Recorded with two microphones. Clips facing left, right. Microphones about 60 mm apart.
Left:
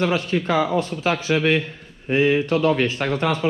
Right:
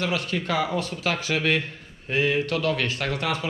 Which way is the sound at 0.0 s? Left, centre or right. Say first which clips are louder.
Left 6 dB; left.